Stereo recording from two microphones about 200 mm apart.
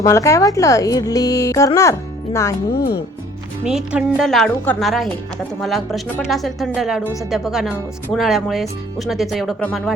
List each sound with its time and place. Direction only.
0.0 s a woman's voice: 15° left (ahead or behind)
2.7 s speech: 50° left (ahead or behind)
3.7 s speech: 5° right (ahead or behind)